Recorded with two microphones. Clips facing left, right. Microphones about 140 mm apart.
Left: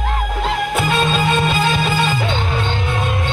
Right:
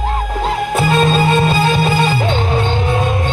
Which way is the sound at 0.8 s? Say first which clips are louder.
Right 6 dB; 35° right (ahead or behind).